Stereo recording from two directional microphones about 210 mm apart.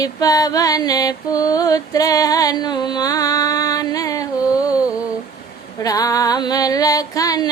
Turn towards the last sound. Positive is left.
turn(degrees=15)  # may be behind; listen again after turning